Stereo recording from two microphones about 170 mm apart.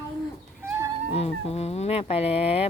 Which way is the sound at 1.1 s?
35° left (ahead or behind).